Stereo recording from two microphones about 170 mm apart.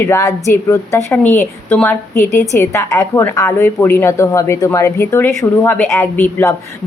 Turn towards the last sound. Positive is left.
turn(degrees=10)  # may be behind; listen again after turning